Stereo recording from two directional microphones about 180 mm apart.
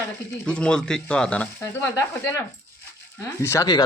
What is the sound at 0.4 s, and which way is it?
Speech, 5° left (ahead or behind).